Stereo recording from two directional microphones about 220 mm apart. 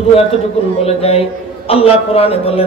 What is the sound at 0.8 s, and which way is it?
A man's voice, 25° left (ahead or behind).